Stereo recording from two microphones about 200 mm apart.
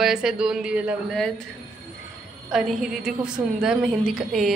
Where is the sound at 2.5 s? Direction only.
Centre (ahead or behind).